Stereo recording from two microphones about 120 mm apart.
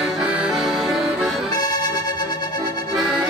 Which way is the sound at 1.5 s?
35° left (ahead or behind).